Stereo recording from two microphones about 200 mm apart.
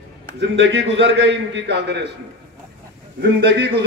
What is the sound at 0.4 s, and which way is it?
A man's voice, 60° right (ahead or behind).